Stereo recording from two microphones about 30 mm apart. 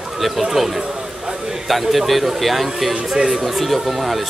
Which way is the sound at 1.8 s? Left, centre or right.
Centre.